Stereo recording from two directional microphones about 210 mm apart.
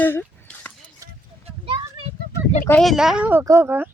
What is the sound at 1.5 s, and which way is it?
Children playing, 25° right (ahead or behind).